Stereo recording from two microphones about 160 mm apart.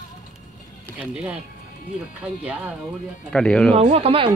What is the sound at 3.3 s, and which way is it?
Speech, 5° left (ahead or behind).